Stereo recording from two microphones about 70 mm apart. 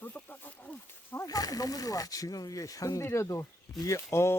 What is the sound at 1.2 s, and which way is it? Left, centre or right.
Speech, left.